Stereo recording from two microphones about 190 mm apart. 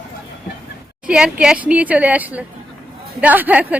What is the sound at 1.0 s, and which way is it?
A woman's voice, 5° right (ahead or behind).